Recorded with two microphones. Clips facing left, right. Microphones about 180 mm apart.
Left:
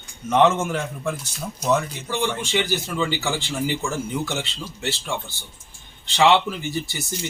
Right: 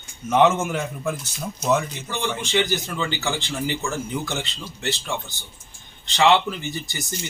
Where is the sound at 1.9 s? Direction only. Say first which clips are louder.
Left 2 dB; 10° left (ahead or behind).